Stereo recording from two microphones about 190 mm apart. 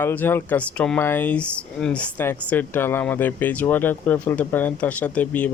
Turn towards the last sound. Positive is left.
turn(degrees=10)  # may be behind; listen again after turning